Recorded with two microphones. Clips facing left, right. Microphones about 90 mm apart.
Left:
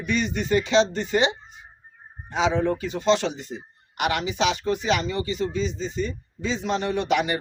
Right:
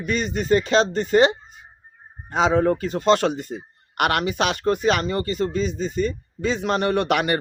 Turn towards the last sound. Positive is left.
turn(degrees=-60)  # may be behind; listen again after turning